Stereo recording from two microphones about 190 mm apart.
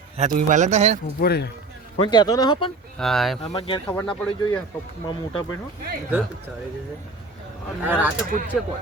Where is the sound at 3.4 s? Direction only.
30° left (ahead or behind).